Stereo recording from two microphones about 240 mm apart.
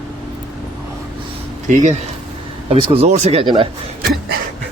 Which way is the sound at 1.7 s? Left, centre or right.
Right.